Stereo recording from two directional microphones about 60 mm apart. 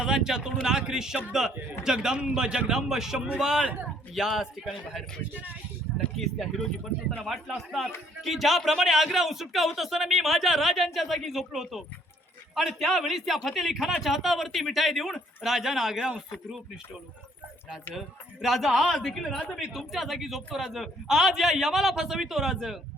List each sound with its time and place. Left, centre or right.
0.0 s speech: centre
3.2 s speech: right
4.1 s a man's voice: centre
6.1 s a man's voice: centre
18.4 s a man's voice: centre